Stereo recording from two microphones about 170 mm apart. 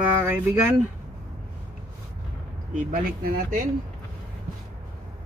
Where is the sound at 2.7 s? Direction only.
50° right (ahead or behind).